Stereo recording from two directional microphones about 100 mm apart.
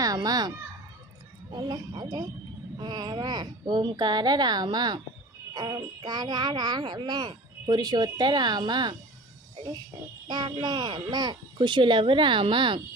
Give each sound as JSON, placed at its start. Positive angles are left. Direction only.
{"t": 0.0, "sound": "children playing", "side_deg": -40}
{"t": 1.5, "sound": "speech", "side_deg": -45}
{"t": 10.2, "sound": "speech", "side_deg": -45}